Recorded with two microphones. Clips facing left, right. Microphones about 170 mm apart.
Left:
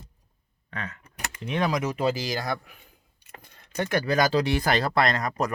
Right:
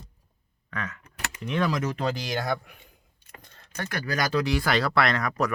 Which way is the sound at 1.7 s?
10° left (ahead or behind).